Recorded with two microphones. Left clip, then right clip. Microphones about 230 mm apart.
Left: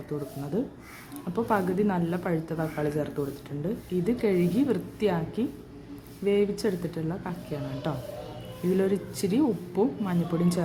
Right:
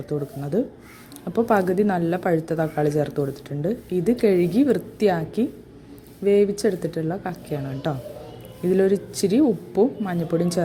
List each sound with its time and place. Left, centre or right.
0.1 s speech: centre